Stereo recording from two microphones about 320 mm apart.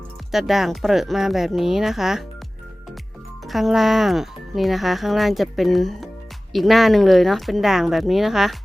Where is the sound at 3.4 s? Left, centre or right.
Centre.